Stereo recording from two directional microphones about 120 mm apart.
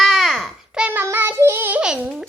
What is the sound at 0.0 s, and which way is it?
Child singing, centre (ahead or behind).